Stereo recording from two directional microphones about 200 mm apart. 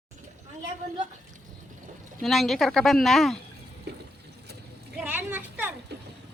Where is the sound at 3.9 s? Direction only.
55° right (ahead or behind).